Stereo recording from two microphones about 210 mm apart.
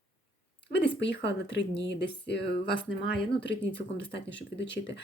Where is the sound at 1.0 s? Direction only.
55° left (ahead or behind).